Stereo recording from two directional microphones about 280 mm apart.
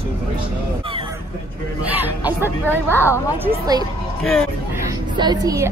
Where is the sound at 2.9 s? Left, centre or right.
Centre.